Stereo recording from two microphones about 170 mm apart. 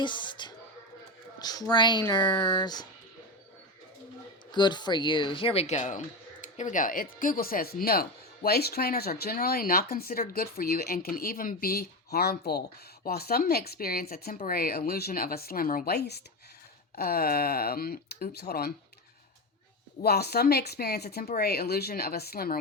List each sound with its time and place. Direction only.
0.0 s speech: 25° left (ahead or behind)
4.5 s speech: 25° left (ahead or behind); by 18.7 s 65° left (ahead or behind)
20.0 s speech: 70° left (ahead or behind)